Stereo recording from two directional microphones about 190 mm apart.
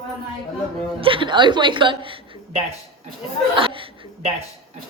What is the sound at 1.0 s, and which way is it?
Speech, 25° right (ahead or behind).